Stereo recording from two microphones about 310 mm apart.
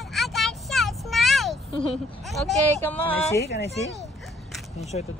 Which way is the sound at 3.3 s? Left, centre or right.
Left.